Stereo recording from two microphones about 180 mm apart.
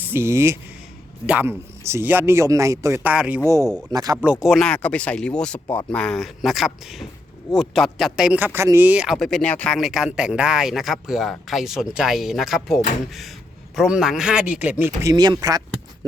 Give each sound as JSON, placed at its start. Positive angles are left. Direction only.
{"t": 0.0, "sound": "speech", "side_deg": -15}
{"t": 3.5, "sound": "speech", "side_deg": -20}
{"t": 4.2, "sound": "speech", "side_deg": -5}
{"t": 15.1, "sound": "speech", "side_deg": -20}